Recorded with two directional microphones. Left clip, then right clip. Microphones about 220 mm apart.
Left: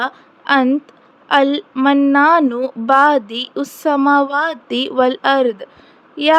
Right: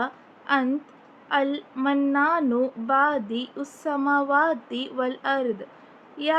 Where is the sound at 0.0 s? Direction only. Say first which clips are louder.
Left 9 dB; 45° left (ahead or behind).